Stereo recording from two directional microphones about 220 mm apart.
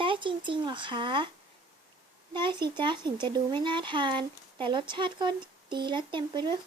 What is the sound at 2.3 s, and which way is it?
A child's voice, 20° right (ahead or behind).